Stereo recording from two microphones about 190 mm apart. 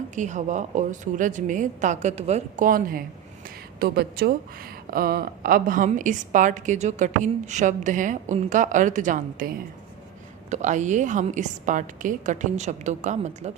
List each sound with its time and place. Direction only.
0.2 s a woman's voice: 40° right (ahead or behind)
10.5 s a woman's voice: 40° right (ahead or behind)